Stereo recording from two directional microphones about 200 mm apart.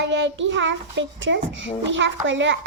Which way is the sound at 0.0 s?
65° right (ahead or behind).